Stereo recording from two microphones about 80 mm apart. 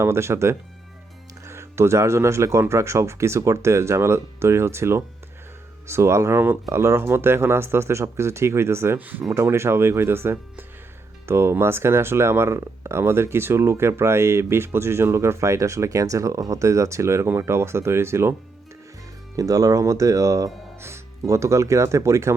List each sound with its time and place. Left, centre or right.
0.0 s speech: right
9.0 s speech: right
9.3 s speech: right
19.4 s speech: right